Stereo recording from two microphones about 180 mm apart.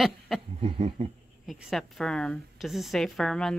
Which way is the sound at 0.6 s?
35° right (ahead or behind).